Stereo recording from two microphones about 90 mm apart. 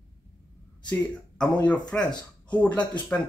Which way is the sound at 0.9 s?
15° left (ahead or behind).